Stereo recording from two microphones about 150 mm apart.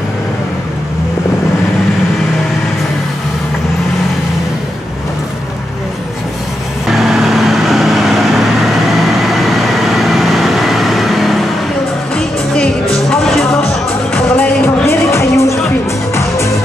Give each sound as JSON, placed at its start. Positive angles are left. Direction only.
{"t": 6.9, "sound": "vehicle", "side_deg": 0}
{"t": 9.8, "sound": "vehicle", "side_deg": 0}
{"t": 13.1, "sound": "music", "side_deg": 5}